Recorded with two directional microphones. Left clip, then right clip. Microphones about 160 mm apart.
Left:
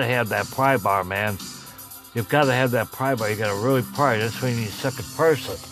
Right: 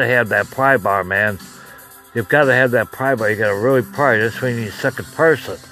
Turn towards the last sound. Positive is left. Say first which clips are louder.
# right 5 dB
turn(degrees=-25)  # may be behind; listen again after turning